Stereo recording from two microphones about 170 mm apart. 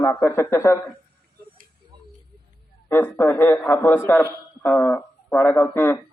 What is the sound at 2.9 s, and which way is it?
A man's voice, 15° left (ahead or behind).